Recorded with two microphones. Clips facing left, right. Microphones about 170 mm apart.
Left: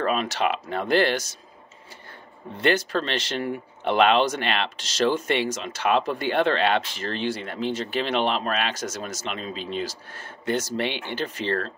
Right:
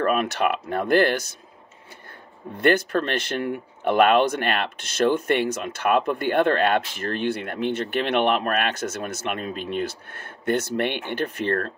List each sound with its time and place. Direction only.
0.0 s speech: 55° right (ahead or behind)
2.5 s speech: 55° right (ahead or behind)